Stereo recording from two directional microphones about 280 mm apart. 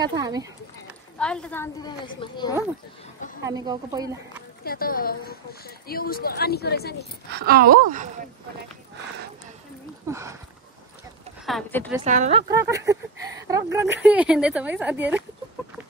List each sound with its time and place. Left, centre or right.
0.0 s speech: centre
1.1 s a woman's voice: centre
3.4 s speech: centre
4.6 s speech: left
7.2 s a woman's voice: right
10.0 s speech: centre
11.4 s speech: centre
12.0 s speech: right; by 15.2 s centre